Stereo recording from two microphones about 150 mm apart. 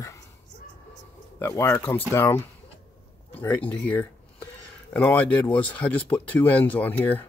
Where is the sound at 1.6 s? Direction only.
15° left (ahead or behind).